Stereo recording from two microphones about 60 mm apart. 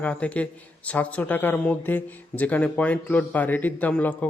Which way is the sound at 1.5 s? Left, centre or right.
Left.